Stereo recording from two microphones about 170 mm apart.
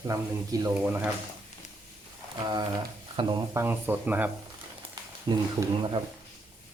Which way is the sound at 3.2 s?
20° right (ahead or behind).